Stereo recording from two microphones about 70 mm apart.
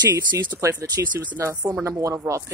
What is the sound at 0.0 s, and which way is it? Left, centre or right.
Speech, right.